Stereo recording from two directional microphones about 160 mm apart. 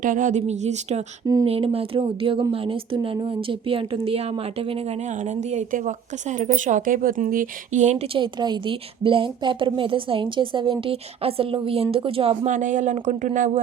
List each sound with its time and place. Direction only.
0.0 s speech: 55° right (ahead or behind); by 4.3 s 35° right (ahead or behind)
5.2 s speech: 45° right (ahead or behind)
12.5 s speech: 50° right (ahead or behind)